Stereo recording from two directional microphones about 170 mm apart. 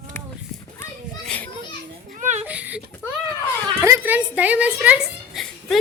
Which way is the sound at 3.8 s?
15° right (ahead or behind).